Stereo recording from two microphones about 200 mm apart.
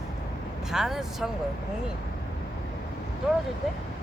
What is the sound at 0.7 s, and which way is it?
Speech, centre (ahead or behind).